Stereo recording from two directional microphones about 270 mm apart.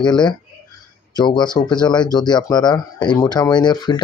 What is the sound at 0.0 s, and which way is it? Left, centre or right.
Speech, centre.